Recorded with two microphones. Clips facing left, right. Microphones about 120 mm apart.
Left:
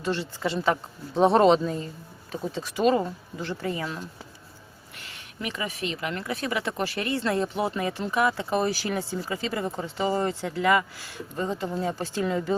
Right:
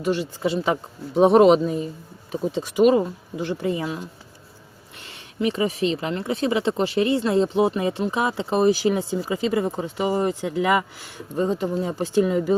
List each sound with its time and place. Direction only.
0.0 s speech: 15° right (ahead or behind)
4.9 s speech: 25° right (ahead or behind)